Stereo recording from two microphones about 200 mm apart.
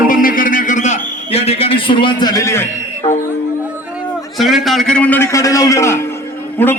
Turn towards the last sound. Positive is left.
turn(degrees=10)  # may be behind; listen again after turning